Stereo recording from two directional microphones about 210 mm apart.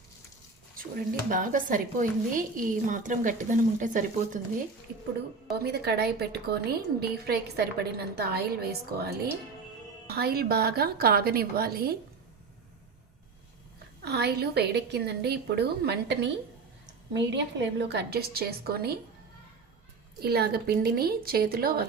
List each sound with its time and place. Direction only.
0.8 s a woman's voice: 40° right (ahead or behind)
5.6 s a woman's voice: 50° right (ahead or behind)
14.0 s a woman's voice: 50° right (ahead or behind)
20.2 s a woman's voice: 45° right (ahead or behind)